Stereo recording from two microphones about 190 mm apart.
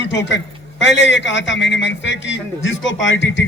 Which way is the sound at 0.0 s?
70° left (ahead or behind).